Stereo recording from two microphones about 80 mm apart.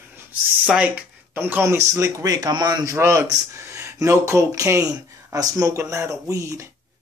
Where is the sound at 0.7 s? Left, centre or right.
Centre.